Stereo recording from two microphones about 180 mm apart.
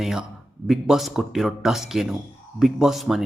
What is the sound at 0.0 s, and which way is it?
Speech, centre (ahead or behind).